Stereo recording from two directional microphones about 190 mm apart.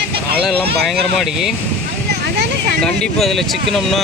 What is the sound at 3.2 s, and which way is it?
Speech, centre (ahead or behind).